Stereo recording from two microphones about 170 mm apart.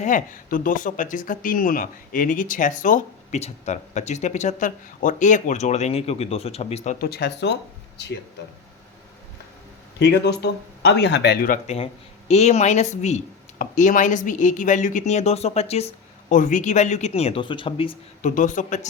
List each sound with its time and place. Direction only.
0.0 s speech: 50° left (ahead or behind)
7.0 s speech: 70° left (ahead or behind); by 8.1 s 90° left
10.0 s speech: 90° left
11.4 s speech: 45° left (ahead or behind)
18.2 s speech: 50° left (ahead or behind)